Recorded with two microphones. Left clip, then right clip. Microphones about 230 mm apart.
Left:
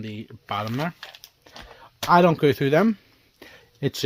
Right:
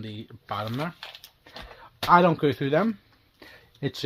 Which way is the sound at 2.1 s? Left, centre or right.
Left.